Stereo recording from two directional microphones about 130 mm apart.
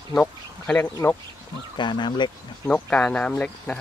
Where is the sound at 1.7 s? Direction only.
35° left (ahead or behind).